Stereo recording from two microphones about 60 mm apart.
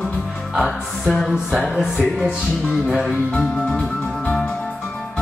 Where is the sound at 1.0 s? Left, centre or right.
Centre.